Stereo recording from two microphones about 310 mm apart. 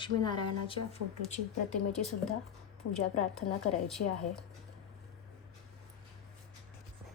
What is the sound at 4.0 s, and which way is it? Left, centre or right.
Speech, left.